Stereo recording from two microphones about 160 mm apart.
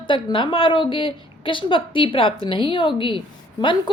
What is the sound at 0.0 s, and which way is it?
A woman's voice, 30° left (ahead or behind).